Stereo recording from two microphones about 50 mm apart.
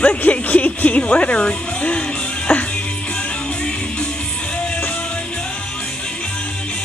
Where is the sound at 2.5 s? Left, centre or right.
Left.